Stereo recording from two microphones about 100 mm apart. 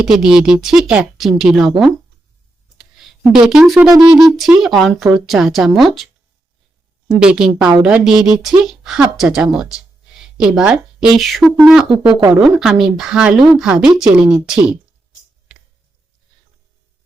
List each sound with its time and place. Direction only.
0.0 s speech: 5° right (ahead or behind)
2.7 s a sound: centre (ahead or behind)
3.3 s speech: 5° right (ahead or behind)
3.8 s a sound: 40° right (ahead or behind)
4.2 s speech: 5° right (ahead or behind)
7.1 s a woman's voice: 5° right (ahead or behind)